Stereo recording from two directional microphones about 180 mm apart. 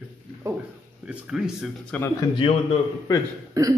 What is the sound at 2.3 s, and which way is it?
Speech, 30° left (ahead or behind).